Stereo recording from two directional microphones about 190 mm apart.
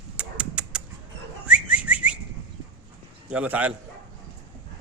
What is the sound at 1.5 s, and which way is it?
Whistling, 5° right (ahead or behind).